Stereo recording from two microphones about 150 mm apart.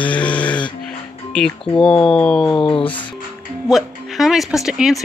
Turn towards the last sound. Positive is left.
turn(degrees=-5)  # may be behind; listen again after turning